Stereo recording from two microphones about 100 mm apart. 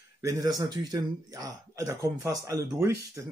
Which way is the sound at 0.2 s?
35° right (ahead or behind).